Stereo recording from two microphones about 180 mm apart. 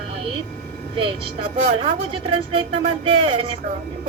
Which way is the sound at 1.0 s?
30° right (ahead or behind).